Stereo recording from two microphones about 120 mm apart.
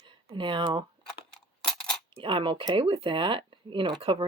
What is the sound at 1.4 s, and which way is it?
Coin, 5° left (ahead or behind).